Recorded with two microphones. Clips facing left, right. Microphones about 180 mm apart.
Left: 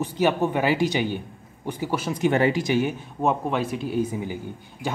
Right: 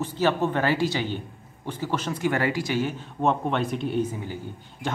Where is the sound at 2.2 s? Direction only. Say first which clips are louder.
Left 5 dB; 20° left (ahead or behind).